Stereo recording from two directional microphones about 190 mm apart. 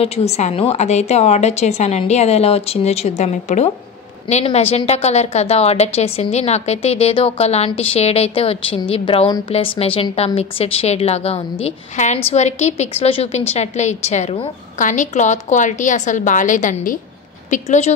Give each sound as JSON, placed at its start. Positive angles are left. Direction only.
{"t": 0.0, "sound": "a woman's voice", "side_deg": 35}